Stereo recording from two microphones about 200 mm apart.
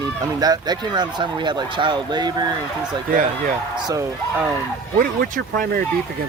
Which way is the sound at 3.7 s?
15° right (ahead or behind).